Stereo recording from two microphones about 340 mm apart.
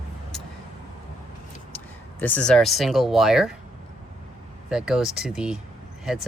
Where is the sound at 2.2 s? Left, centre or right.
Centre.